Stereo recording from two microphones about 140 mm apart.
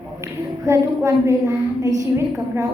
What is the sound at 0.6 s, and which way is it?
A woman's voice, 20° right (ahead or behind).